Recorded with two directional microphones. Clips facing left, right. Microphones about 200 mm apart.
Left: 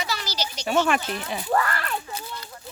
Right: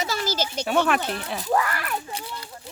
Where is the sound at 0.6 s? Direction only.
Centre (ahead or behind).